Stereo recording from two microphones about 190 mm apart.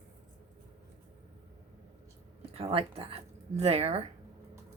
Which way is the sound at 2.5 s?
30° right (ahead or behind).